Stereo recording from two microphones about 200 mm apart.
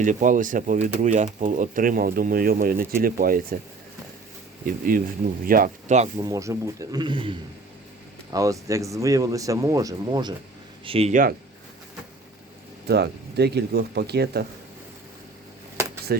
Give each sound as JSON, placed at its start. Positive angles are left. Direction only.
{"t": 0.0, "sound": "speech", "side_deg": -40}
{"t": 4.6, "sound": "speech", "side_deg": -45}
{"t": 6.1, "sound": "a man's voice", "side_deg": -15}
{"t": 12.9, "sound": "speech", "side_deg": -55}